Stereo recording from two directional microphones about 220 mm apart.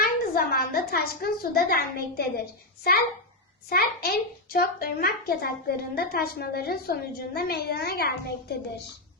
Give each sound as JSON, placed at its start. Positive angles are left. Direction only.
{"t": 0.0, "sound": "a woman's voice", "side_deg": 45}
{"t": 3.7, "sound": "a child's voice", "side_deg": 45}